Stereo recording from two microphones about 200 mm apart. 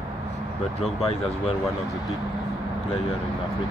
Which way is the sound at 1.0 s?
30° left (ahead or behind).